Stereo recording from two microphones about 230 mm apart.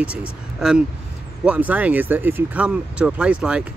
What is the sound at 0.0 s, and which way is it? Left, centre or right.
Speech, centre.